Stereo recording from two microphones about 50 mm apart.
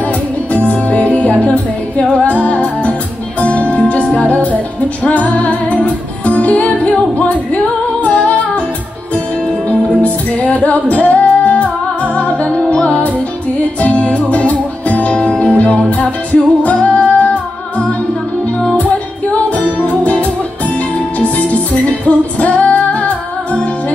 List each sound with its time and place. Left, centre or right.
0.5 s music: left
9.7 s music: left
15.1 s music: centre
19.8 s music: left
22.0 s music: left